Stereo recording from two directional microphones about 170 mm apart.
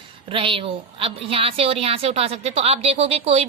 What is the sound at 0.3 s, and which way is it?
A woman's voice, 30° right (ahead or behind).